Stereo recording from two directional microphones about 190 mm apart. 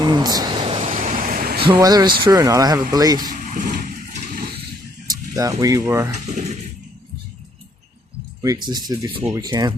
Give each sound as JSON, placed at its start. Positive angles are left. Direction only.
{"t": 0.0, "sound": "a sound", "side_deg": -20}
{"t": 1.6, "sound": "speech", "side_deg": -25}
{"t": 3.2, "sound": "speech", "side_deg": -45}
{"t": 5.1, "sound": "speech", "side_deg": -20}
{"t": 6.2, "sound": "speech", "side_deg": -35}
{"t": 8.4, "sound": "speech", "side_deg": -20}